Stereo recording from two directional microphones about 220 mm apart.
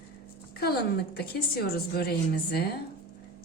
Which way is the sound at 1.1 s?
45° left (ahead or behind).